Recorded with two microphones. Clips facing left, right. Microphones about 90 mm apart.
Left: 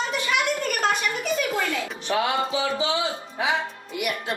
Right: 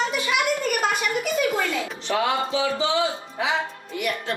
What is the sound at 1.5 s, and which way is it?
Music, 20° right (ahead or behind).